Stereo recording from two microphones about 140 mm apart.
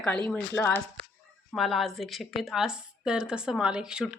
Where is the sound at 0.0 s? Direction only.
5° left (ahead or behind).